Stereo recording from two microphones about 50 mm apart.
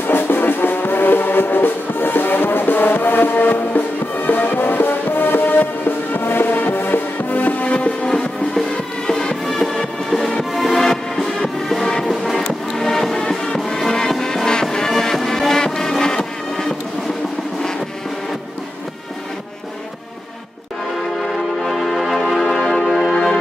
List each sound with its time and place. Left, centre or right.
0.0 s music: left
8.1 s music: centre
21.3 s music: centre